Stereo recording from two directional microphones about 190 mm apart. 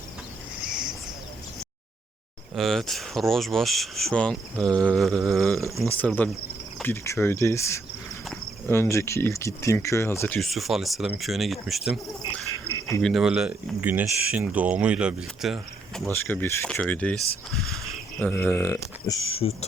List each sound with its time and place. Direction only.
0.7 s a sound: 5° right (ahead or behind)
2.6 s speech: centre (ahead or behind)
5.5 s speech: 15° right (ahead or behind)
5.9 s speech: 10° left (ahead or behind)
13.0 s speech: centre (ahead or behind)
16.2 s speech: 10° left (ahead or behind)
19.3 s speech: 30° left (ahead or behind)